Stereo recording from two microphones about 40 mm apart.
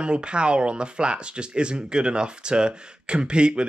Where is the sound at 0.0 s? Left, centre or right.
Right.